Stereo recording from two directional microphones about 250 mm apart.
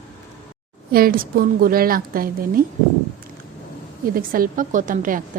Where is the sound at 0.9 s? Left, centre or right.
Right.